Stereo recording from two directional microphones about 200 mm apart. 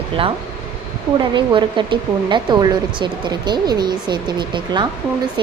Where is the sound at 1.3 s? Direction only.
25° right (ahead or behind).